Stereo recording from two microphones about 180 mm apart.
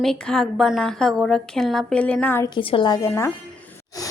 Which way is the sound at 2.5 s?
25° left (ahead or behind).